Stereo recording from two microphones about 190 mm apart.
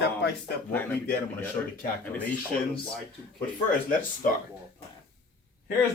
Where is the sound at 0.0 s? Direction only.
65° left (ahead or behind).